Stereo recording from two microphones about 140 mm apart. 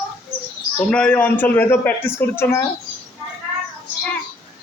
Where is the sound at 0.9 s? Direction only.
10° left (ahead or behind).